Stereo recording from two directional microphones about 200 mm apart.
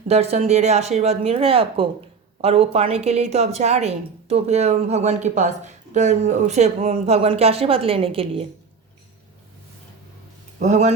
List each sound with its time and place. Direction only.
0.1 s a woman's voice: 30° right (ahead or behind)
10.6 s a woman's voice: 35° right (ahead or behind)